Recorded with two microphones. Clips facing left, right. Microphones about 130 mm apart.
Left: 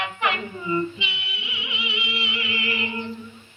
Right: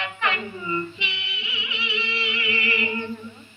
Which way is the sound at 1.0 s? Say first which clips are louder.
Even; 10° left (ahead or behind).